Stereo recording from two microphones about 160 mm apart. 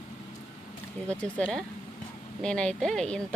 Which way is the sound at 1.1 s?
5° left (ahead or behind).